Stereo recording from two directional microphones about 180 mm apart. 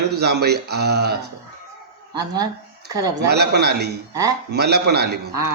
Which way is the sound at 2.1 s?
20° right (ahead or behind).